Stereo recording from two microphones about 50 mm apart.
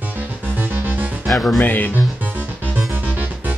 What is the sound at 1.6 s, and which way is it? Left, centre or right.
Speech, left.